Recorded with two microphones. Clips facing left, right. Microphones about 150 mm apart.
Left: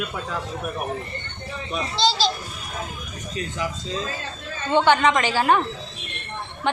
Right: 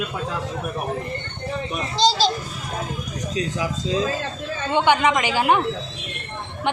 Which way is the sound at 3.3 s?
90° right.